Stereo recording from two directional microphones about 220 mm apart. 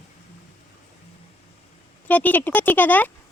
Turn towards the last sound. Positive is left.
turn(degrees=10)  # may be behind; listen again after turning